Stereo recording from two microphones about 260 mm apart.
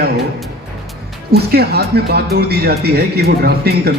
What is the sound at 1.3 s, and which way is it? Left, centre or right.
Speech, right.